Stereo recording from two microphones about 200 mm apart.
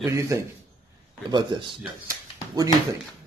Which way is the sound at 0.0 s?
15° right (ahead or behind).